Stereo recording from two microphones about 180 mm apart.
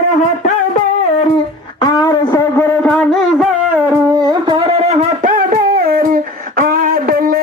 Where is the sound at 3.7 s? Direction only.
10° right (ahead or behind).